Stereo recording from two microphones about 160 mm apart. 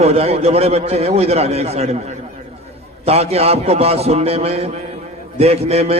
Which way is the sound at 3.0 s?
40° right (ahead or behind).